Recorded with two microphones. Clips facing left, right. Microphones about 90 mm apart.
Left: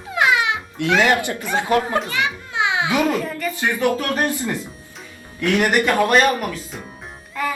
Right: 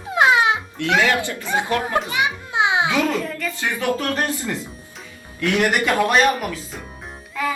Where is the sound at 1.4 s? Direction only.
20° right (ahead or behind).